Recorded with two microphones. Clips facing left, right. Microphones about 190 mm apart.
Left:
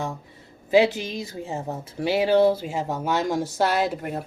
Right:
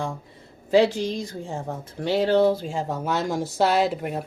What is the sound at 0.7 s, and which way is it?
Speech, 5° left (ahead or behind).